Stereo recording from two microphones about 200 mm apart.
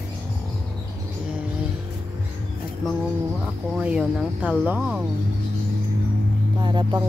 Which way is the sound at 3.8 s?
5° right (ahead or behind).